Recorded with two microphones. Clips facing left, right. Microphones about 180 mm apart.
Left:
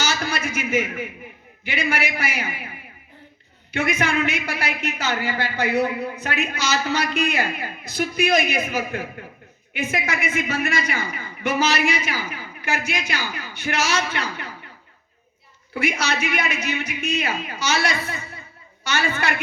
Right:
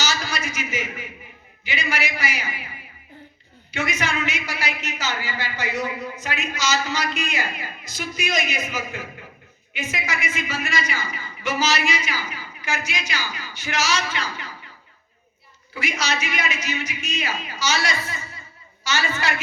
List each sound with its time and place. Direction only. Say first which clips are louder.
0.0 s a sound: left 2 dB; 55° left (ahead or behind)
1.6 s a woman's voice: left 3 dB; 55° left (ahead or behind)
3.7 s a woman's voice: left 4 dB; 55° left (ahead or behind)
15.7 s a woman's voice: left 3 dB; 55° left (ahead or behind)